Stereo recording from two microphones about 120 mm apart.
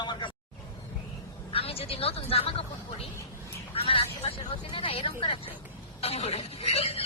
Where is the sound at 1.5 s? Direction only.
55° left (ahead or behind).